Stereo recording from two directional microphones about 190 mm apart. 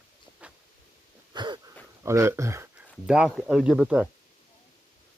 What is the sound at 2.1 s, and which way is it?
Speech, 15° right (ahead or behind).